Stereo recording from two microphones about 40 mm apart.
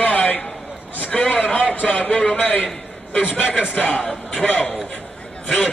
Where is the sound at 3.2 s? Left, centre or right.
Right.